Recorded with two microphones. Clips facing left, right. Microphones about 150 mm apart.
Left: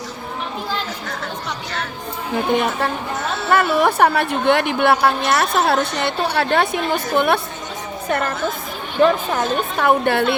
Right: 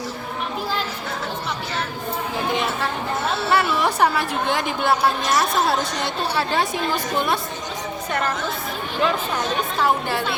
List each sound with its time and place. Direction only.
2.5 s speech: 55° left (ahead or behind)
9.7 s speech: 60° left (ahead or behind)